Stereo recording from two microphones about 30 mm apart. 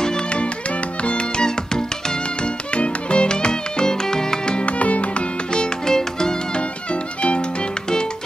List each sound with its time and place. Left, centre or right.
0.3 s music: left
2.7 s music: left
4.6 s music: left
5.5 s music: left
6.5 s music: left